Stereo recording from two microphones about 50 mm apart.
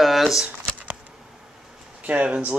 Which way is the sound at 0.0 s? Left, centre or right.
Centre.